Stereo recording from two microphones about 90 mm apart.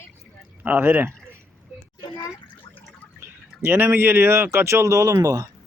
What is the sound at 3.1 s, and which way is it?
Speech, 25° right (ahead or behind).